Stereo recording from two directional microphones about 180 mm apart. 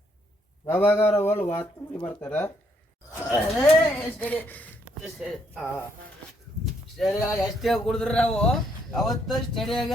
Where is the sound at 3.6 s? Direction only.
10° left (ahead or behind).